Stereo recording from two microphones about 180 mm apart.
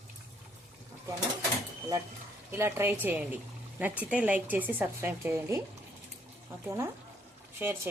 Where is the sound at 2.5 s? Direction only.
15° right (ahead or behind).